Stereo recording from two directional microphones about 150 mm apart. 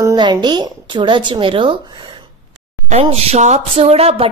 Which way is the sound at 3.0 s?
45° right (ahead or behind).